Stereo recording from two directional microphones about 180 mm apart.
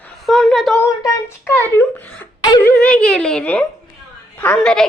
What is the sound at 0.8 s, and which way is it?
A woman's voice, 15° left (ahead or behind).